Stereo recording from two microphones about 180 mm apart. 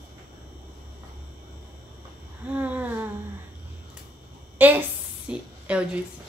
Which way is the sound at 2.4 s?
10° right (ahead or behind).